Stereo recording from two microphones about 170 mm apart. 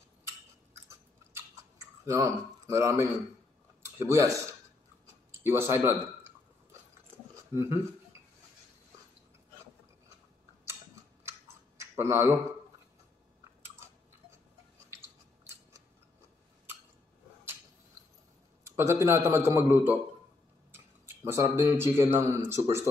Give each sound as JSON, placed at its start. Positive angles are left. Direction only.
{"t": 2.0, "sound": "a man's voice", "side_deg": -20}
{"t": 5.4, "sound": "a man's voice", "side_deg": -15}
{"t": 7.5, "sound": "a man's voice", "side_deg": -15}
{"t": 11.8, "sound": "speech", "side_deg": -15}
{"t": 18.6, "sound": "a man's voice", "side_deg": -15}